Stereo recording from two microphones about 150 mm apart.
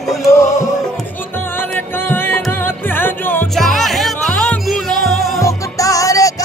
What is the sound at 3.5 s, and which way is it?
Music, centre (ahead or behind).